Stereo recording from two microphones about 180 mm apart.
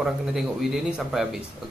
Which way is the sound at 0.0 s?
Centre (ahead or behind).